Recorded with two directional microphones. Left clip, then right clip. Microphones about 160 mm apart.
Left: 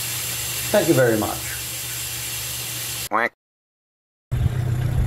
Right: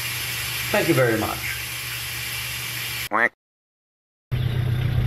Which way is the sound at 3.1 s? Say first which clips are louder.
Right 1 dB; 10° left (ahead or behind).